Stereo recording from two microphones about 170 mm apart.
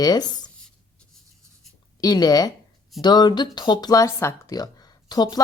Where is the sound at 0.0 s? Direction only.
25° left (ahead or behind).